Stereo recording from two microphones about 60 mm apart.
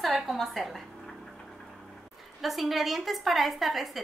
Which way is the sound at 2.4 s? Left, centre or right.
Centre.